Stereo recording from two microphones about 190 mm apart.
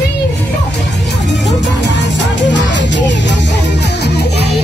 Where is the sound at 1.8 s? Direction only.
65° left (ahead or behind).